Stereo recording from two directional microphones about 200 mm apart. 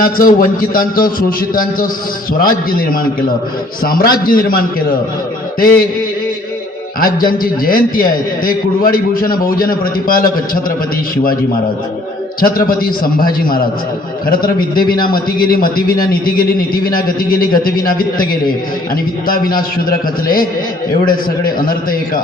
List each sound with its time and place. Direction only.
0.0 s a man's voice: 45° left (ahead or behind)
7.0 s a man's voice: 45° left (ahead or behind)
12.4 s a man's voice: 45° left (ahead or behind)